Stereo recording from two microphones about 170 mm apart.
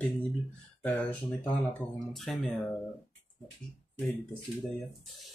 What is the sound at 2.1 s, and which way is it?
Speech, centre (ahead or behind).